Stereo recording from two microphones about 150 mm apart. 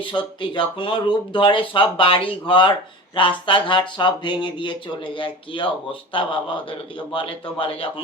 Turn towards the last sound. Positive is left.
turn(degrees=40)  # may be behind; listen again after turning